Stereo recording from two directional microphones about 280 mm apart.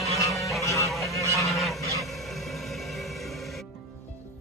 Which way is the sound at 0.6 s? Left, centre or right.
Centre.